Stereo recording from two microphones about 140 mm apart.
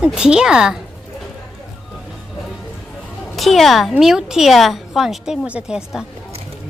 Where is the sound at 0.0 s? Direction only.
5° right (ahead or behind).